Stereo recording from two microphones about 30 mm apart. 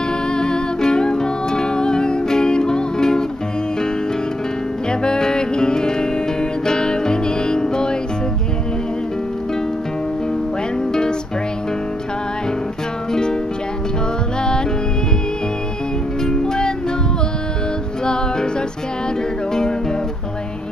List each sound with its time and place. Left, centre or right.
0.3 s music: left
5.0 s music: left
10.9 s music: left
13.1 s music: left
16.3 s music: left
18.0 s music: left